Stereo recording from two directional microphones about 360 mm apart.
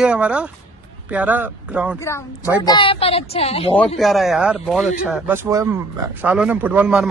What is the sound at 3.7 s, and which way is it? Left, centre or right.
A man's voice, centre.